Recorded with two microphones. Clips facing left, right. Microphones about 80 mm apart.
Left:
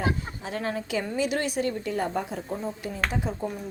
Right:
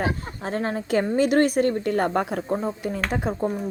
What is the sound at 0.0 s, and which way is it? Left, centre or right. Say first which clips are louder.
A woman's voice: right 2 dB; right.